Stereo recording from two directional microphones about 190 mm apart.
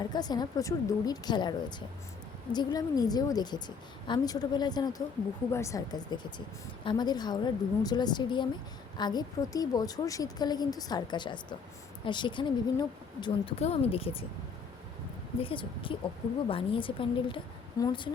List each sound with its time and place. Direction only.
0.0 s a woman's voice: 20° left (ahead or behind)
15.4 s a woman's voice: 30° left (ahead or behind)